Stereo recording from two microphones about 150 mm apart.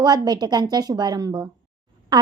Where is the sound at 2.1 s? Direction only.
30° right (ahead or behind).